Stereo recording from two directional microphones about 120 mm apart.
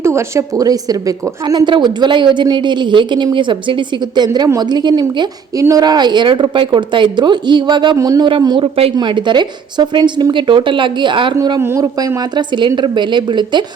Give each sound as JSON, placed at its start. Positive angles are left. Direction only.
{"t": 0.0, "sound": "a woman's voice", "side_deg": -25}
{"t": 7.9, "sound": "speech", "side_deg": -30}
{"t": 8.3, "sound": "a woman's voice", "side_deg": -40}
{"t": 11.6, "sound": "a woman's voice", "side_deg": -25}